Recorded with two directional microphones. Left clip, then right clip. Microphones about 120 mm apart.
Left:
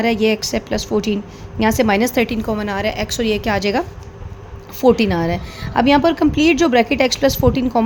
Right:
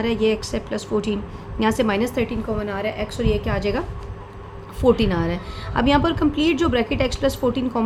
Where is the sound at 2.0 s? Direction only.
80° left.